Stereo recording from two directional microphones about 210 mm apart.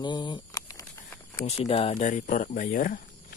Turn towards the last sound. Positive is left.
turn(degrees=40)  # may be behind; listen again after turning